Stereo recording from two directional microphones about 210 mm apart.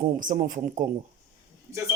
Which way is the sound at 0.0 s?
40° right (ahead or behind).